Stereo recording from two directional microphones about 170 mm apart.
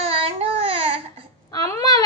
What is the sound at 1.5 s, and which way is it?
Speech, 20° left (ahead or behind).